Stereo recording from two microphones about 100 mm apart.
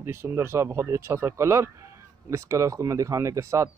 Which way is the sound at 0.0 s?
25° right (ahead or behind).